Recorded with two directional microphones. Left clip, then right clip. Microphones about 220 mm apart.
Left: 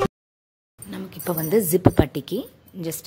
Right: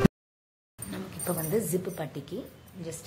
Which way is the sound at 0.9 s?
35° left (ahead or behind).